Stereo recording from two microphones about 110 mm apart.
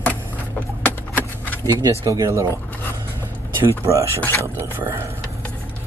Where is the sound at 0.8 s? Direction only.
15° left (ahead or behind).